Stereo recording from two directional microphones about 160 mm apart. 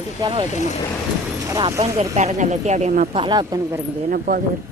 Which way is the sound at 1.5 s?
20° right (ahead or behind).